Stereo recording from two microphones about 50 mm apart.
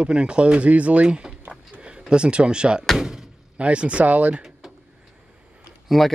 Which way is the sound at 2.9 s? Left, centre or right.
Centre.